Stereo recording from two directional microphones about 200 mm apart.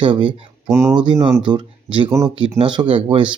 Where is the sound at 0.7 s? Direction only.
15° right (ahead or behind).